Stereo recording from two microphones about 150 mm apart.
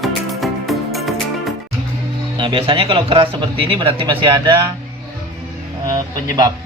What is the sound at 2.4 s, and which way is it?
A man's voice, 35° right (ahead or behind).